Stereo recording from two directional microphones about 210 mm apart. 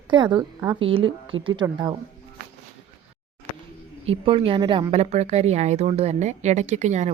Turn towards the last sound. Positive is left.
turn(degrees=-35)  # may be behind; listen again after turning